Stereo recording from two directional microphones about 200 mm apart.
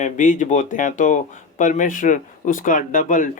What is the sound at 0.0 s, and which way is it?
Speech, 40° left (ahead or behind).